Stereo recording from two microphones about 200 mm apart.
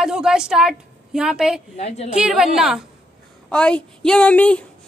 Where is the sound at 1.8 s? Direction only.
30° left (ahead or behind).